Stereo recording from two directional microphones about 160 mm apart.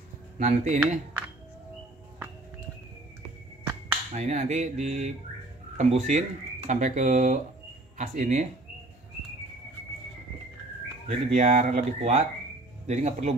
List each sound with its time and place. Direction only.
0.4 s speech: 50° right (ahead or behind)
4.1 s speech: 50° right (ahead or behind)
11.1 s speech: 50° right (ahead or behind)